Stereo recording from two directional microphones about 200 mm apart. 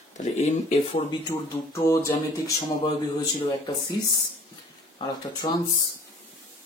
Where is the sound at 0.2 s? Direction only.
35° left (ahead or behind).